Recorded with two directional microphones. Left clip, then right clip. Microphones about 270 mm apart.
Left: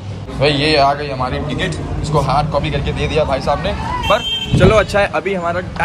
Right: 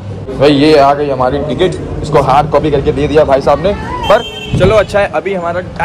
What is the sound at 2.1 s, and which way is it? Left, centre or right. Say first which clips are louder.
Speech: right 8 dB; left.